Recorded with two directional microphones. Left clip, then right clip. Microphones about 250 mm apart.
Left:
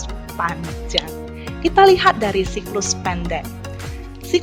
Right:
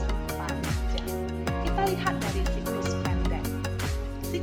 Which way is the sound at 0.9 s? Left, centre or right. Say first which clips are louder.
Left 14 dB; left.